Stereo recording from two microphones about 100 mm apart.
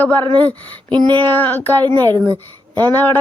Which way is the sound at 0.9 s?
50° right (ahead or behind).